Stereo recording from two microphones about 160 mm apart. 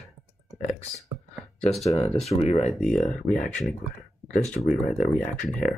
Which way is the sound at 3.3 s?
55° left (ahead or behind).